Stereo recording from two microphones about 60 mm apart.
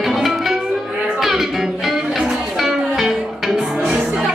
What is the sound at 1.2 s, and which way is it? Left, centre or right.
Music, centre.